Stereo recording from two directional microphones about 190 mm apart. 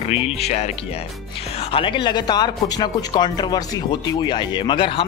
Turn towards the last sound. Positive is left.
turn(degrees=25)  # may be behind; listen again after turning